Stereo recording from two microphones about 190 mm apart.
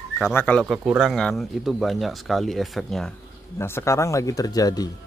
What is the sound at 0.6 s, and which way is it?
Speech, 5° right (ahead or behind).